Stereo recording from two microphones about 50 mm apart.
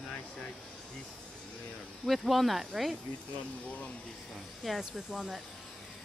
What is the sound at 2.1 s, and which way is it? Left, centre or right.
Speech, centre.